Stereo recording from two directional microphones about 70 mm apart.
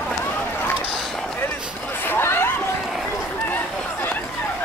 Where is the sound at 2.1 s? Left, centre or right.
Left.